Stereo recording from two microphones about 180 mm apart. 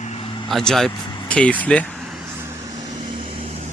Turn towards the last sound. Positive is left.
turn(degrees=-40)  # may be behind; listen again after turning